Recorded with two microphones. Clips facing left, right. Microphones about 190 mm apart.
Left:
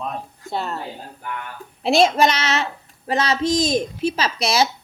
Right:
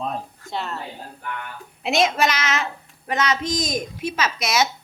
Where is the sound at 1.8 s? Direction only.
30° left (ahead or behind).